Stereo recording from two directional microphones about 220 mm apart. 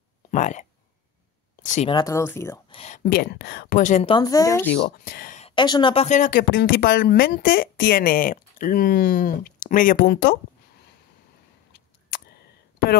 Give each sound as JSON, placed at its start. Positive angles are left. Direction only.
{"t": 0.3, "sound": "speech", "side_deg": 35}
{"t": 1.6, "sound": "a sound", "side_deg": 35}
{"t": 1.9, "sound": "speech", "side_deg": 15}
{"t": 2.7, "sound": "speech", "side_deg": 30}
{"t": 4.7, "sound": "speech", "side_deg": 40}
{"t": 5.5, "sound": "speech", "side_deg": 20}
{"t": 6.5, "sound": "speech", "side_deg": 45}